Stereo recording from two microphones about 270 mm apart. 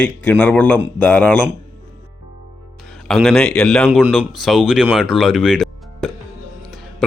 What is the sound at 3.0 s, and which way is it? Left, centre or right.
Speech, centre.